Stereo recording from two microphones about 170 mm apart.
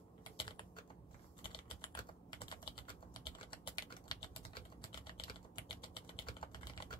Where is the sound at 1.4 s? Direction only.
30° left (ahead or behind).